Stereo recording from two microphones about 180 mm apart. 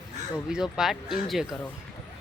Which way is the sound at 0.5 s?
Centre (ahead or behind).